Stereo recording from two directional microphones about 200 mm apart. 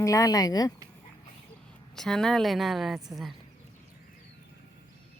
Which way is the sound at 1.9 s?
Centre (ahead or behind).